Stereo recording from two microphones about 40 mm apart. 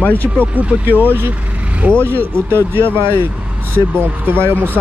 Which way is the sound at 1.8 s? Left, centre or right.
Right.